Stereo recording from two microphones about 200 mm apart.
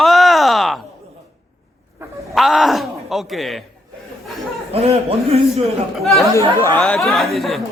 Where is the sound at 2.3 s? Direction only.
Centre (ahead or behind).